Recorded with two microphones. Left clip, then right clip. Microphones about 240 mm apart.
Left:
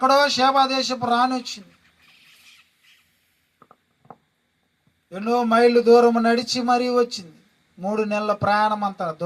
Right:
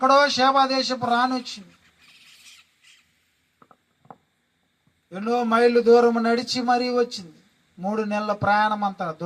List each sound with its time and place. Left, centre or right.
0.0 s a man's voice: left
2.0 s owl: right
3.6 s a sound: left
5.1 s a man's voice: left